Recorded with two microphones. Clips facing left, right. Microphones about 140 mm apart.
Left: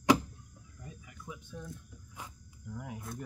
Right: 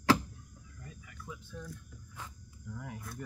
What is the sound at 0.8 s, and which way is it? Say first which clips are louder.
Cricket: left 1 dB; 20° left (ahead or behind).